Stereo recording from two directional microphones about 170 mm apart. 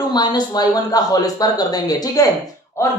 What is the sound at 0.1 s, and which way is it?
Speech, 25° left (ahead or behind).